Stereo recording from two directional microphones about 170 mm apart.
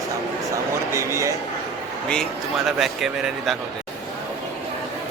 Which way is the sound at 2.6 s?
Centre (ahead or behind).